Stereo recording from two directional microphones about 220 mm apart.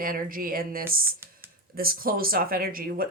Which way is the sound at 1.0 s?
10° right (ahead or behind).